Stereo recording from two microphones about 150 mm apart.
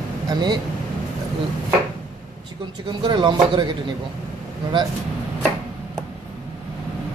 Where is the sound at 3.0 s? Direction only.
30° right (ahead or behind).